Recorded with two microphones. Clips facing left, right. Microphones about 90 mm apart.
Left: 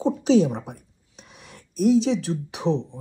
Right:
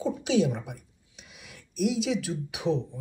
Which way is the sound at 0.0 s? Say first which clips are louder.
Left 6 dB; 35° left (ahead or behind).